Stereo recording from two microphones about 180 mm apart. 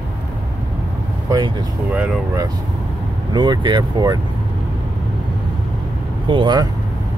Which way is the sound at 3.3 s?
25° right (ahead or behind).